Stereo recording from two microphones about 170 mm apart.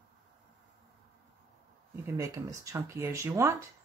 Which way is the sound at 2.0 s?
20° right (ahead or behind).